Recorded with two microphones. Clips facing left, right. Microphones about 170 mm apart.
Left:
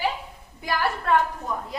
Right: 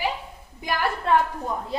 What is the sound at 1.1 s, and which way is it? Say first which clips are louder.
Speech: right 1 dB; 20° right (ahead or behind).